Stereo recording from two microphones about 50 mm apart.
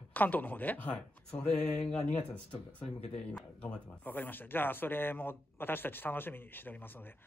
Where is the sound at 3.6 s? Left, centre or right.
Left.